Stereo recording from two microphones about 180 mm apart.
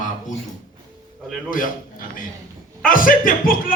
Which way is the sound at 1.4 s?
50° left (ahead or behind).